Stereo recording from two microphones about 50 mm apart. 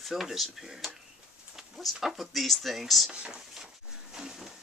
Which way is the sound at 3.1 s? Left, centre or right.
Centre.